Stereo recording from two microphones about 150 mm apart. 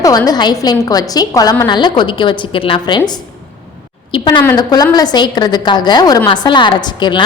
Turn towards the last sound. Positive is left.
turn(degrees=30)  # may be behind; listen again after turning